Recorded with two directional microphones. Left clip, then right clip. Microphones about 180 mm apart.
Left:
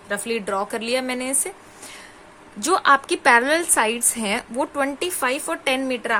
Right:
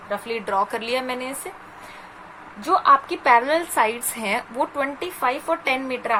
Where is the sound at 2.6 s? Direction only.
65° left (ahead or behind).